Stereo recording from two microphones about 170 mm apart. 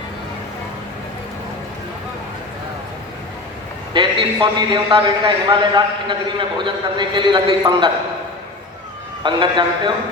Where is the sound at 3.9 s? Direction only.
30° right (ahead or behind).